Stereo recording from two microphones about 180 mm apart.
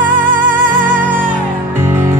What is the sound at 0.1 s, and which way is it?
Music, 50° right (ahead or behind).